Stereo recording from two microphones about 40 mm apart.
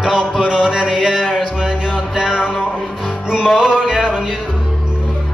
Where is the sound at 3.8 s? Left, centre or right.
Centre.